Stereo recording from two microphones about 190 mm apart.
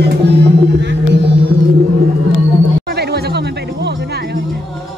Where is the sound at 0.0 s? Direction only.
60° right (ahead or behind).